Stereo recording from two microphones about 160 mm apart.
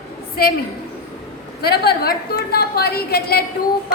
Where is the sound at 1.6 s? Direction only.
80° left.